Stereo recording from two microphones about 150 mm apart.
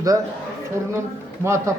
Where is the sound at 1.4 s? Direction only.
20° right (ahead or behind).